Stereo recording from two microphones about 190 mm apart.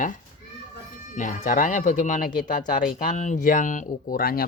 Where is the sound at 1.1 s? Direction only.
45° left (ahead or behind).